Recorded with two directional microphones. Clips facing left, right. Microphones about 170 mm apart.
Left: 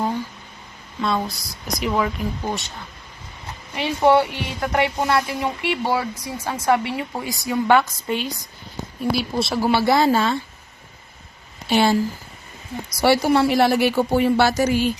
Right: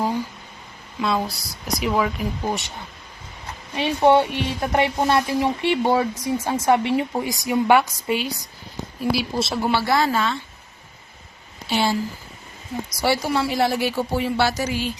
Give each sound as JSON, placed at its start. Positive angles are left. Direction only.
{"t": 1.0, "sound": "speech", "side_deg": 0}
{"t": 2.4, "sound": "speech", "side_deg": -15}
{"t": 3.8, "sound": "speech", "side_deg": -20}
{"t": 9.7, "sound": "speech", "side_deg": 20}
{"t": 10.1, "sound": "speech", "side_deg": 35}
{"t": 11.7, "sound": "a woman's voice", "side_deg": 55}
{"t": 13.0, "sound": "a woman's voice", "side_deg": 60}